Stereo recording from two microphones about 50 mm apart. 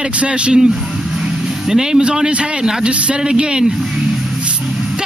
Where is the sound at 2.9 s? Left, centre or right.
Right.